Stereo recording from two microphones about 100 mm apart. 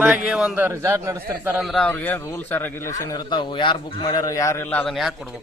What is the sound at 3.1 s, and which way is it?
A man's voice, 50° left (ahead or behind).